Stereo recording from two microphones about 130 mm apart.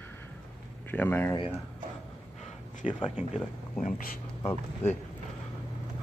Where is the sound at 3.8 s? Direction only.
90° left.